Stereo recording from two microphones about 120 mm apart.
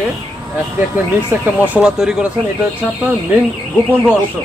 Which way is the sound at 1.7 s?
5° right (ahead or behind).